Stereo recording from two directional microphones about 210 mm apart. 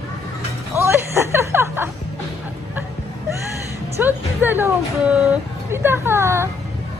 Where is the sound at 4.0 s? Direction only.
10° right (ahead or behind).